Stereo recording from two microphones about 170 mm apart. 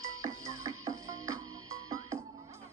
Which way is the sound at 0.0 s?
20° right (ahead or behind).